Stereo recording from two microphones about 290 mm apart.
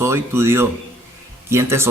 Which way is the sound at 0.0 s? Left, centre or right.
Centre.